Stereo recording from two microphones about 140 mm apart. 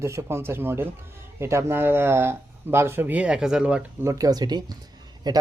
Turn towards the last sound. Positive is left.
turn(degrees=-30)  # may be behind; listen again after turning